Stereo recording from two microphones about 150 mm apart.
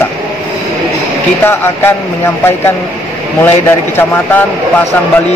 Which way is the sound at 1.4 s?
15° left (ahead or behind).